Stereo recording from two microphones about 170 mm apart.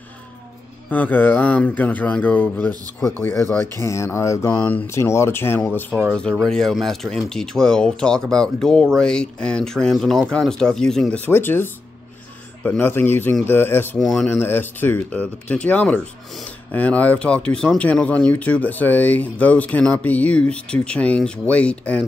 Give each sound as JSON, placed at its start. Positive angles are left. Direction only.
{"t": 0.8, "sound": "speech", "side_deg": 10}
{"t": 5.9, "sound": "speech", "side_deg": -10}
{"t": 6.3, "sound": "speech", "side_deg": 5}
{"t": 13.9, "sound": "speech", "side_deg": 0}